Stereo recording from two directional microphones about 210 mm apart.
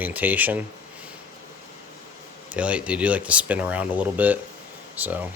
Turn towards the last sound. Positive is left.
turn(degrees=-10)  # may be behind; listen again after turning